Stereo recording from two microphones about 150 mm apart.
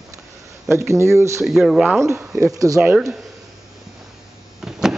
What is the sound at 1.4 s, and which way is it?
Speech, centre (ahead or behind).